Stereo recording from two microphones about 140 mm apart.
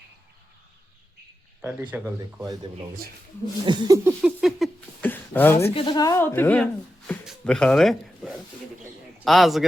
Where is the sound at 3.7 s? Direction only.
25° right (ahead or behind).